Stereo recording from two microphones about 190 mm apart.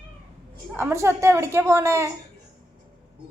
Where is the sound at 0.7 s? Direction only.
15° right (ahead or behind).